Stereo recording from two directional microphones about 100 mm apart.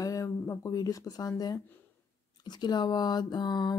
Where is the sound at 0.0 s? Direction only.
35° left (ahead or behind).